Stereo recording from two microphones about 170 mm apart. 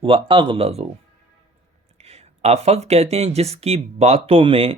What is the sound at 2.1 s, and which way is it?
Speech, 40° right (ahead or behind).